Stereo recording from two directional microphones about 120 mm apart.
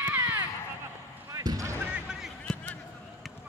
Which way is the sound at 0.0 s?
20° right (ahead or behind).